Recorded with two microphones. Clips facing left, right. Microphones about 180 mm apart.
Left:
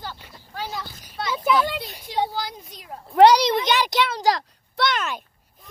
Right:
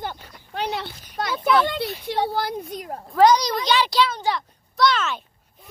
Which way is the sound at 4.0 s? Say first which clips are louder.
Right 2 dB; 55° left (ahead or behind).